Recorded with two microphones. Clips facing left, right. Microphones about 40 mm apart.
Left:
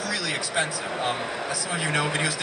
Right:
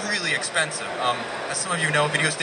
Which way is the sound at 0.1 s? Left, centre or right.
Right.